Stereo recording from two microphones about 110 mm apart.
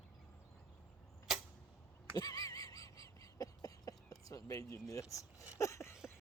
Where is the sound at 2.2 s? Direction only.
35° left (ahead or behind).